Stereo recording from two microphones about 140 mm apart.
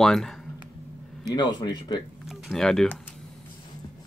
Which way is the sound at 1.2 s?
30° left (ahead or behind).